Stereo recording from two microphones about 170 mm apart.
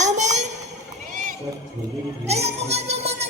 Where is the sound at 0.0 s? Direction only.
45° right (ahead or behind).